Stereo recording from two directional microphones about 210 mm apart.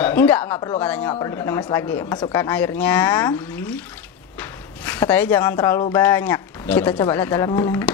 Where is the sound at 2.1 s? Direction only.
25° left (ahead or behind).